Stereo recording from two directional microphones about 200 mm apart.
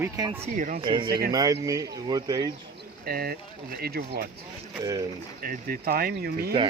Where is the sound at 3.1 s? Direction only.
50° right (ahead or behind).